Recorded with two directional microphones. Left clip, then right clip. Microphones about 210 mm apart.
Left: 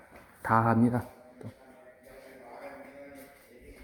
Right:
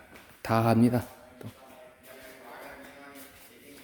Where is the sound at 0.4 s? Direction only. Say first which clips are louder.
Even; 35° right (ahead or behind).